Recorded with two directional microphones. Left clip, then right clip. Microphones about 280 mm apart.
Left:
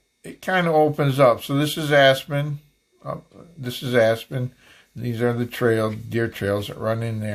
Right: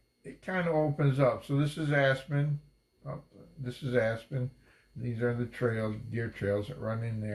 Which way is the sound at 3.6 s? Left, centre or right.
Left.